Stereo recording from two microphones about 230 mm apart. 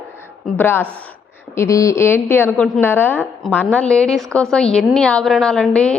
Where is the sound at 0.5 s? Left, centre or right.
Centre.